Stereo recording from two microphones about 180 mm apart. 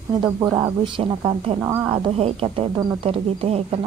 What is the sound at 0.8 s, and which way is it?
Speech, 30° right (ahead or behind).